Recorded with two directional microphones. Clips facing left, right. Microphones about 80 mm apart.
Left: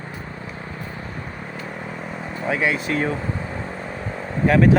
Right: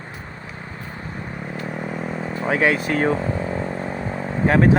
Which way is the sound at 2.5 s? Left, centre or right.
Right.